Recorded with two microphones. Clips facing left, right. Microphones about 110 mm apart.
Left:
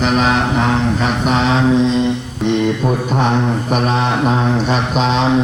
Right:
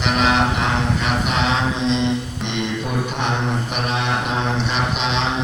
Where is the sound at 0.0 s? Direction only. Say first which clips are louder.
Left 3 dB; 40° left (ahead or behind).